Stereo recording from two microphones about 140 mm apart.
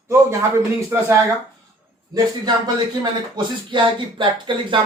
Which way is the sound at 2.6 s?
30° right (ahead or behind).